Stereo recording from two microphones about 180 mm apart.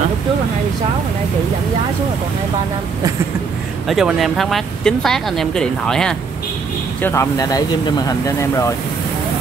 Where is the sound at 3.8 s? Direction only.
Centre (ahead or behind).